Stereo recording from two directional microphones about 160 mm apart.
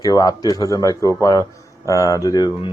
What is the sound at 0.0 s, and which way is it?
Speech, 25° left (ahead or behind).